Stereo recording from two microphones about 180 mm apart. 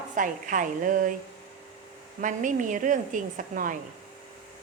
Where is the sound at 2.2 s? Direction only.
45° right (ahead or behind).